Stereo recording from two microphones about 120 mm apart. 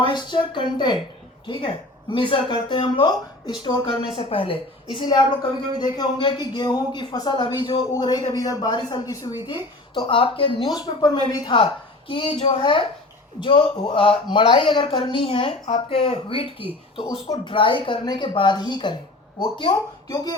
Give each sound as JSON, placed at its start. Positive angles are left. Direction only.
{"t": 0.0, "sound": "speech", "side_deg": 35}
{"t": 9.9, "sound": "speech", "side_deg": 40}
{"t": 11.5, "sound": "speech", "side_deg": 45}